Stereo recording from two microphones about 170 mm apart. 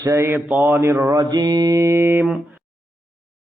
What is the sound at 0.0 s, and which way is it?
Speech, 15° right (ahead or behind).